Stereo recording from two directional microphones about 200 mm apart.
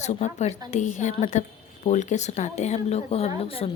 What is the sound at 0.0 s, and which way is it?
A woman's voice, 35° left (ahead or behind).